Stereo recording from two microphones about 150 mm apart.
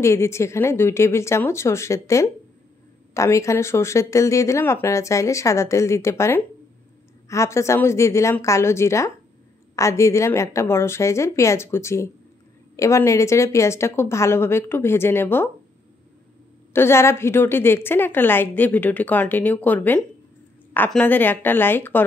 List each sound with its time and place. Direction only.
0.0 s a woman's voice: 20° left (ahead or behind)
16.7 s a woman's voice: 15° left (ahead or behind)